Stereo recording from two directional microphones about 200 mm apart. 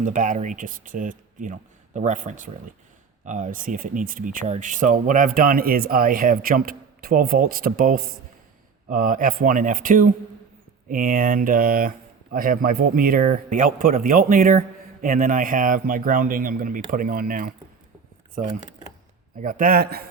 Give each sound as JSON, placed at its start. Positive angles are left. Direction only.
{"t": 0.0, "sound": "speech", "side_deg": -40}